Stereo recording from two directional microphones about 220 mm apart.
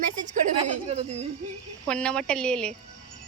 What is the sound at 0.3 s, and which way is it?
A child's voice, 30° right (ahead or behind).